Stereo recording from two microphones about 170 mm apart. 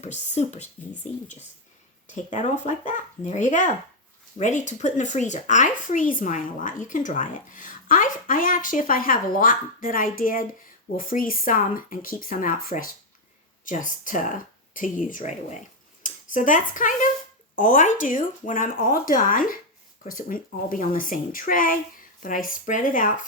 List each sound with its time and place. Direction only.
0.0 s speech: 40° left (ahead or behind)